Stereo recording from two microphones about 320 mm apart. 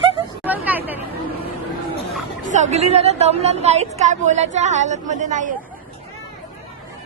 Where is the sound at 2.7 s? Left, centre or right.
Centre.